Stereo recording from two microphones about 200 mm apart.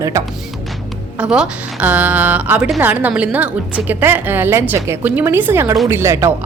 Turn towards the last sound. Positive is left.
turn(degrees=-15)  # may be behind; listen again after turning